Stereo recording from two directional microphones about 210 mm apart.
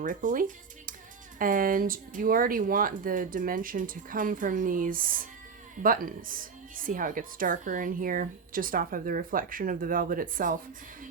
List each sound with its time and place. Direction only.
0.0 s speech: 40° right (ahead or behind)